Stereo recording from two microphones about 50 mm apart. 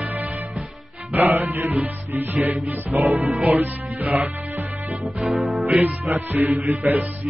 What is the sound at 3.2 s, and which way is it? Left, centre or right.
Music, centre.